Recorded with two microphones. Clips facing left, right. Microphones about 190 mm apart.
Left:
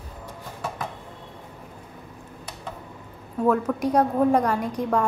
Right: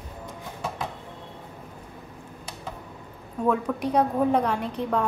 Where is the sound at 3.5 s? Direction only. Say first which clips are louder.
Left 3 dB; 10° left (ahead or behind).